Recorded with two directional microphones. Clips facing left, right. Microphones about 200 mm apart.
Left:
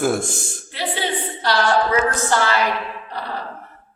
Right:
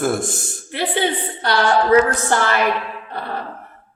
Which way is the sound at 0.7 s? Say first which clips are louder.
Right 4 dB; 55° right (ahead or behind).